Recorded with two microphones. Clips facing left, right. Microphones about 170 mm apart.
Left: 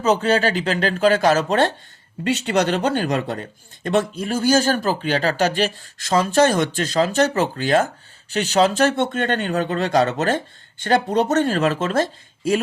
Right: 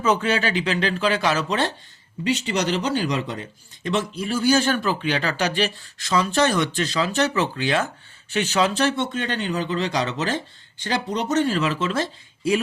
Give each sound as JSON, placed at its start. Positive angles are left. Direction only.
{"t": 0.0, "sound": "speech", "side_deg": 40}